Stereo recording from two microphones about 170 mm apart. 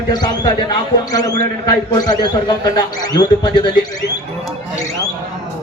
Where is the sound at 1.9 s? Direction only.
20° left (ahead or behind).